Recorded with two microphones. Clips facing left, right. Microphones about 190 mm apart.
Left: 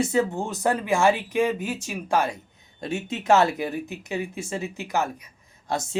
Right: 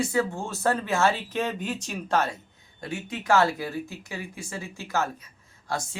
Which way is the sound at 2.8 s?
25° left (ahead or behind).